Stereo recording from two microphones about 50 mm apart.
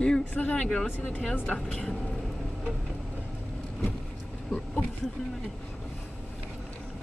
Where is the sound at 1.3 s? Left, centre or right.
Left.